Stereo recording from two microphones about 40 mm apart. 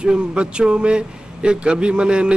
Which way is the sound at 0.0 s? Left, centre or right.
Right.